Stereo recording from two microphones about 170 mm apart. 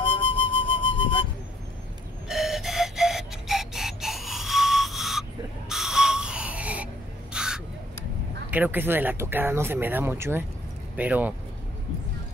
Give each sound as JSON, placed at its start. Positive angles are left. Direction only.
{"t": 0.0, "sound": "music", "side_deg": 30}
{"t": 2.2, "sound": "clock", "side_deg": 0}
{"t": 5.7, "sound": "a sound", "side_deg": -5}
{"t": 7.3, "sound": "crow", "side_deg": -5}
{"t": 8.5, "sound": "speech", "side_deg": -10}